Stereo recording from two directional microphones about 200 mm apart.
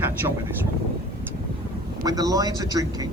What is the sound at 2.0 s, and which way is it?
Speech, 20° right (ahead or behind).